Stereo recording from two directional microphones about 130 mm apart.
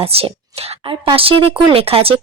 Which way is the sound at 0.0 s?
50° right (ahead or behind).